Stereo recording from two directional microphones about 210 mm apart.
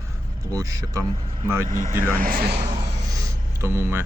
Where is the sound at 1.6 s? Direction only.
40° right (ahead or behind).